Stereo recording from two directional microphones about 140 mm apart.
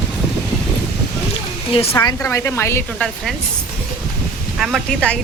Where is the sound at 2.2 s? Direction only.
20° left (ahead or behind).